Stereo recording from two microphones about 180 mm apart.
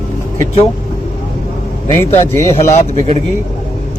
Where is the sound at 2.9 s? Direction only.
35° right (ahead or behind).